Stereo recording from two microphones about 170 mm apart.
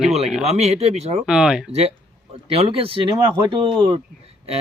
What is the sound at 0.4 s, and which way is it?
Speech, 40° right (ahead or behind).